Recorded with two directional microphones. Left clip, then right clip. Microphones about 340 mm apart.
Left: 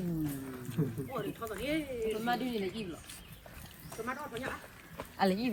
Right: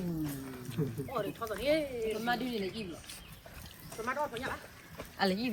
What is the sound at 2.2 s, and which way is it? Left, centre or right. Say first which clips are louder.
Speech: even; centre.